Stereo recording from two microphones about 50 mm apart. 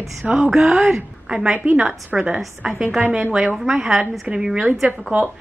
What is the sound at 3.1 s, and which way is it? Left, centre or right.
A woman's voice, centre.